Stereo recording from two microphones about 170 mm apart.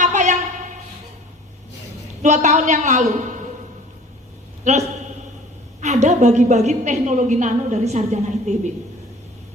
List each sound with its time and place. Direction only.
0.0 s a sound: 45° right (ahead or behind)
2.2 s a woman's voice: 45° right (ahead or behind)
4.7 s a woman's voice: 45° right (ahead or behind)
5.8 s a woman's voice: 45° right (ahead or behind)